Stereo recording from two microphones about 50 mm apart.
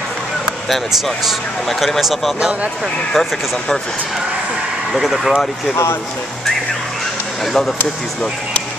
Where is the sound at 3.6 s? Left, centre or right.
Centre.